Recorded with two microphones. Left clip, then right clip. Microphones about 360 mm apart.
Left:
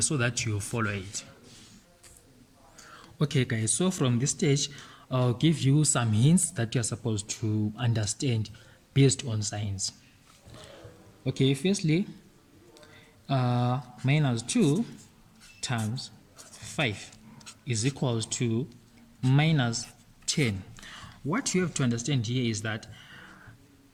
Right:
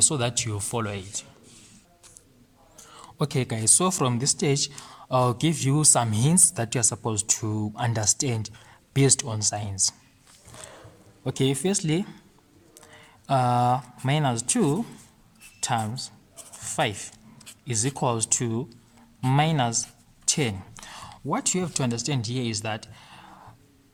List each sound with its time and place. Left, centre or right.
0.0 s speech: centre
2.7 s speech: centre
7.4 s speech: right
7.8 s speech: centre
11.3 s speech: centre
13.2 s speech: centre
16.6 s writing: centre
17.7 s speech: centre